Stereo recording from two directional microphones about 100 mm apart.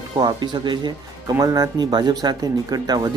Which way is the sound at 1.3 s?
35° right (ahead or behind).